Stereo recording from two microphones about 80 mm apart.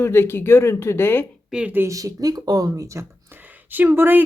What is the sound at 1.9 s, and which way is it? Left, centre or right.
Speech, right.